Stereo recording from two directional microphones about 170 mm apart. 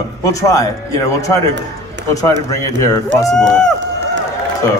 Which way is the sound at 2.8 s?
20° left (ahead or behind).